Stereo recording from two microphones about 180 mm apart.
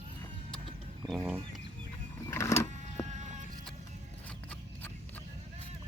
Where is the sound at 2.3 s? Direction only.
15° left (ahead or behind).